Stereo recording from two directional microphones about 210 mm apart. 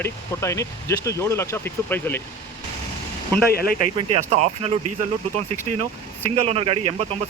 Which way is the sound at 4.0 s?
30° right (ahead or behind).